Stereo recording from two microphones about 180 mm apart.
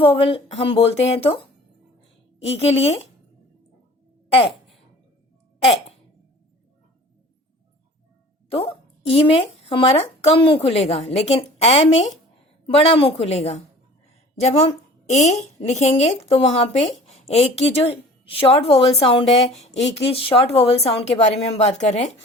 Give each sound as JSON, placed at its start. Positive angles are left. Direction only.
{"t": 0.0, "sound": "speech", "side_deg": 30}
{"t": 4.3, "sound": "a sound", "side_deg": 30}
{"t": 8.4, "sound": "speech", "side_deg": 35}
{"t": 15.1, "sound": "speech", "side_deg": 40}